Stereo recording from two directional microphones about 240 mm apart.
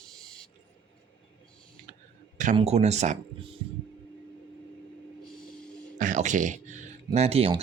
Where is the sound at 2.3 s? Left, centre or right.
Right.